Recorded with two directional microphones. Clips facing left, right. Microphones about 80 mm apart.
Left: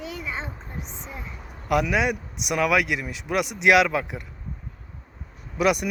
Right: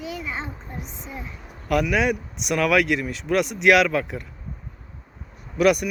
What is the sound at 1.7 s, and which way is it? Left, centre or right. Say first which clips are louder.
Speech: right 1 dB; centre.